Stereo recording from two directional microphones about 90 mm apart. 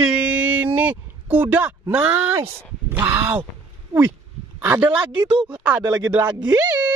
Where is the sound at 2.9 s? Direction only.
25° right (ahead or behind).